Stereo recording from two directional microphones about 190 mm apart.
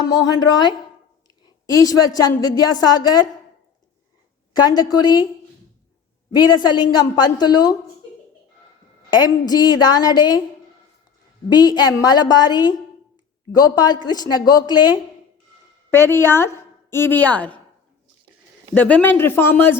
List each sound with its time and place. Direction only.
0.0 s a woman's voice: 20° left (ahead or behind)
1.8 s a woman's voice: 20° left (ahead or behind)
4.7 s a woman's voice: 20° left (ahead or behind)
6.3 s a woman's voice: 20° left (ahead or behind)
9.0 s a woman's voice: 20° left (ahead or behind)
11.4 s a woman's voice: 20° left (ahead or behind)
18.7 s speech: 5° left (ahead or behind)